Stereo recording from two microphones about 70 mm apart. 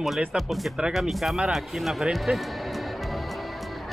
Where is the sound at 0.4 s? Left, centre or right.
Centre.